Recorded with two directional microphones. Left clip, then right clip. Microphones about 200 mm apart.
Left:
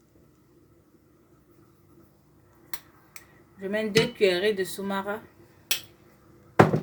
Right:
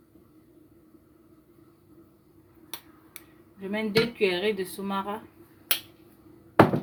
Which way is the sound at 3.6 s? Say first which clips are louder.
Left 2 dB; 25° left (ahead or behind).